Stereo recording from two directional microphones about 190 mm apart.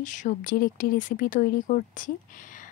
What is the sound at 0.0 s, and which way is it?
Speech, 40° left (ahead or behind).